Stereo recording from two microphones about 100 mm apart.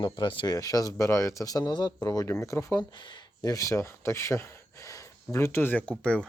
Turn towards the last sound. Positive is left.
turn(degrees=10)  # may be behind; listen again after turning